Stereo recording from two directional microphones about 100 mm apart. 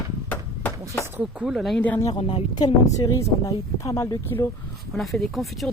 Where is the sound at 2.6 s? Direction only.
35° left (ahead or behind).